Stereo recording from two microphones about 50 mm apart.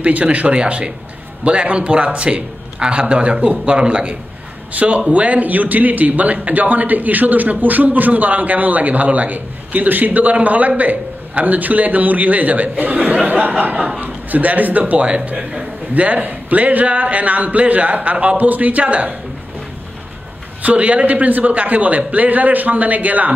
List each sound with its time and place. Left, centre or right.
0.0 s a man's voice: right
13.7 s speech: centre
14.0 s a man's voice: right
18.1 s a man's voice: centre
18.4 s a man's voice: right
20.6 s a man's voice: right